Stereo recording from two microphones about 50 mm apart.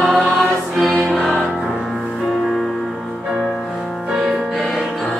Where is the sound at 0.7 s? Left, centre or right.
Centre.